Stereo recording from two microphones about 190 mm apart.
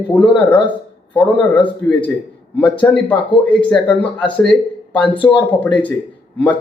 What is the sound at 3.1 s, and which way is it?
Speech, 5° left (ahead or behind).